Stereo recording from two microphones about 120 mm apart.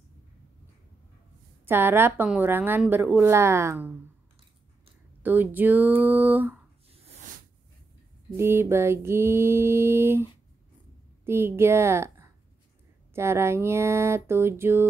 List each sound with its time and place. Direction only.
1.7 s mantra: 20° right (ahead or behind)
2.2 s speech: 15° right (ahead or behind)
2.9 s mantra: 15° right (ahead or behind)
5.2 s speech: 15° right (ahead or behind)
6.9 s a sound: 65° right (ahead or behind)
8.4 s mantra: 20° right (ahead or behind)
11.2 s a woman's voice: 20° right (ahead or behind)
13.1 s mantra: 20° right (ahead or behind)